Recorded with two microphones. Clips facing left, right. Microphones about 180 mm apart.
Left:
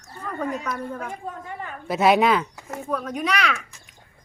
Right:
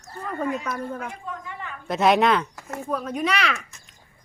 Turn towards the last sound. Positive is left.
turn(degrees=0)  # may be behind; listen again after turning